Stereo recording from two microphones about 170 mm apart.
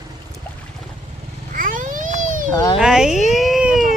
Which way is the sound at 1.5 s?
55° right (ahead or behind).